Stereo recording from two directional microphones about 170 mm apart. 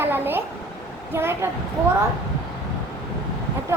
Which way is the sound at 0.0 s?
10° right (ahead or behind).